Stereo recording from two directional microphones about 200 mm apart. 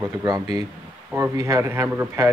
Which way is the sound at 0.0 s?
20° right (ahead or behind).